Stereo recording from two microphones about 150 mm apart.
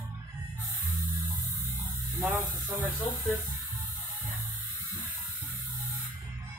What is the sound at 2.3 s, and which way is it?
Speech, centre (ahead or behind).